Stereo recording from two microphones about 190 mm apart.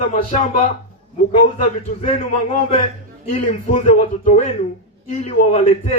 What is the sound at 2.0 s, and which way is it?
A man's voice, 40° left (ahead or behind).